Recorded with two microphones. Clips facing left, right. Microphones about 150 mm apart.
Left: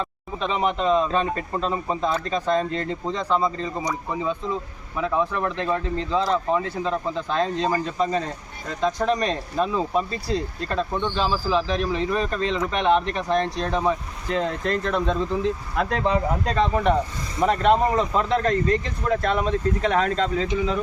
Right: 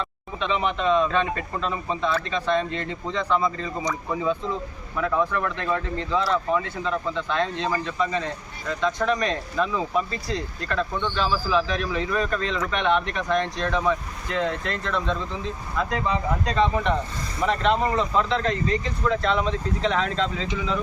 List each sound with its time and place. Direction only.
0.3 s speech: 40° left (ahead or behind)
3.8 s speech: 20° left (ahead or behind); by 15.2 s 45° left (ahead or behind)
16.5 s speech: 50° left (ahead or behind)